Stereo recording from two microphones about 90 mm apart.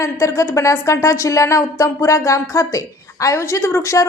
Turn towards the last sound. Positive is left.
turn(degrees=30)  # may be behind; listen again after turning